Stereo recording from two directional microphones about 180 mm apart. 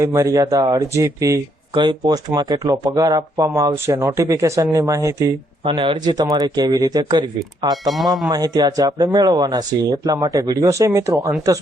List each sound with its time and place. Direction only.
0.0 s speech: 15° right (ahead or behind)
7.9 s speech: centre (ahead or behind)
8.3 s speech: 20° right (ahead or behind)